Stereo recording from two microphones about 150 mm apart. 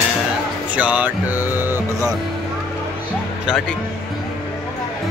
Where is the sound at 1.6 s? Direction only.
15° right (ahead or behind).